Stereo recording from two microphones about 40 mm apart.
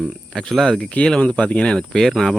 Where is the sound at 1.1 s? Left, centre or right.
Left.